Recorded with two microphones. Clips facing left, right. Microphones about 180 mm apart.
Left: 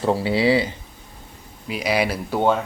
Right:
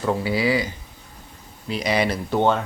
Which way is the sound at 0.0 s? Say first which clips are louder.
Left 3 dB; 30° left (ahead or behind).